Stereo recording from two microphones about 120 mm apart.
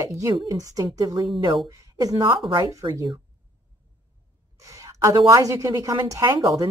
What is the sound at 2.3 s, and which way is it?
Speech, 40° right (ahead or behind).